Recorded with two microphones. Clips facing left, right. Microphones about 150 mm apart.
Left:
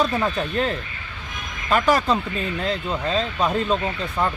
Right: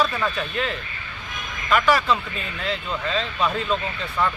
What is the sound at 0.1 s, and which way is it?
Speech, 35° left (ahead or behind).